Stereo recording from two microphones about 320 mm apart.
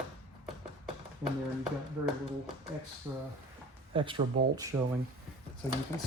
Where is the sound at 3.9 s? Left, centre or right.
Centre.